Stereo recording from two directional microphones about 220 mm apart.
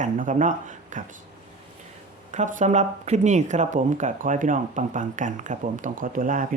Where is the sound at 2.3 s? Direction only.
35° right (ahead or behind).